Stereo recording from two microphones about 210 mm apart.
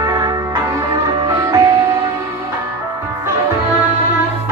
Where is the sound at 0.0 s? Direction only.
20° right (ahead or behind).